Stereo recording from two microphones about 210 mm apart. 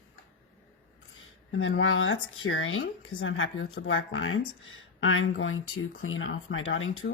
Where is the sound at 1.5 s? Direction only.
70° left (ahead or behind).